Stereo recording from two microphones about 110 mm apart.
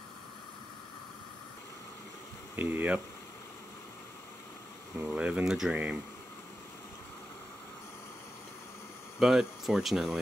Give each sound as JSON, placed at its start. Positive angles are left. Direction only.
{"t": 2.5, "sound": "speech", "side_deg": -15}
{"t": 4.9, "sound": "speech", "side_deg": -10}
{"t": 9.2, "sound": "speech", "side_deg": -5}